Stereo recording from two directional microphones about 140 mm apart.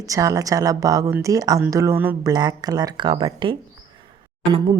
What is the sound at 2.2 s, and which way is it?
A woman's voice, 30° right (ahead or behind).